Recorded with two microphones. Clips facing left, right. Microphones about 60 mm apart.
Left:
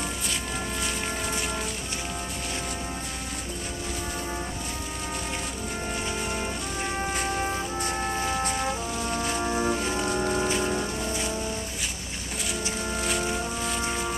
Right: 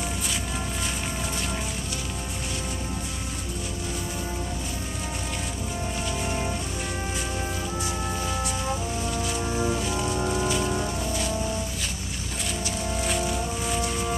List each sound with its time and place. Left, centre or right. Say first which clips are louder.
7.8 s organ: left 2 dB; left
10.4 s rain on surface: even; left